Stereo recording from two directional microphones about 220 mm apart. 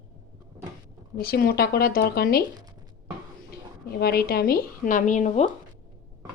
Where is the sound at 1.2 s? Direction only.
45° left (ahead or behind).